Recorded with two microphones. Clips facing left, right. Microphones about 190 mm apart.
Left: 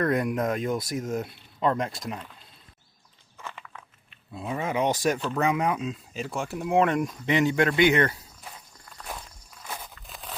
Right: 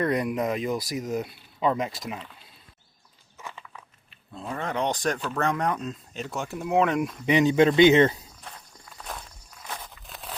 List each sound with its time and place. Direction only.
0.0 s speech: centre (ahead or behind)
4.4 s speech: 5° left (ahead or behind)
7.3 s speech: 15° right (ahead or behind)
8.4 s walk: 5° left (ahead or behind)
10.1 s a sound: centre (ahead or behind)